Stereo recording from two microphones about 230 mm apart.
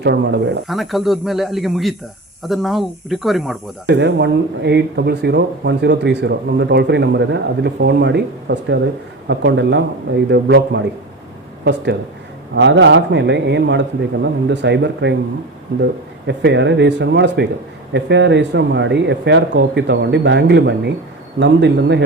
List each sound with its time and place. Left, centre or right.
0.0 s speech: right
0.7 s speech: centre
3.8 s speech: right
12.5 s speech: right